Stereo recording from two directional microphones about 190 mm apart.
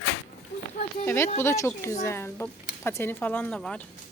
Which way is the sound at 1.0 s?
15° left (ahead or behind).